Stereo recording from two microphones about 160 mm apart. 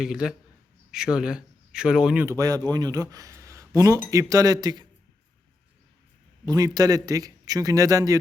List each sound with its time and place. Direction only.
0.0 s a man's voice: 5° right (ahead or behind)
2.2 s speech: 20° right (ahead or behind)
6.4 s speech: 25° right (ahead or behind)